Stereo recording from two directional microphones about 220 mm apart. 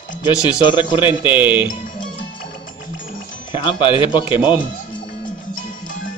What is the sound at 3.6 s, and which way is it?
Speech, 20° left (ahead or behind).